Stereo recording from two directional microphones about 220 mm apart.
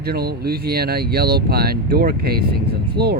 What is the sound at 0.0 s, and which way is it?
Speech, 45° right (ahead or behind).